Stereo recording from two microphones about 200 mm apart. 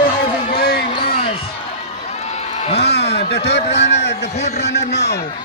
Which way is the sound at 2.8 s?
55° left (ahead or behind).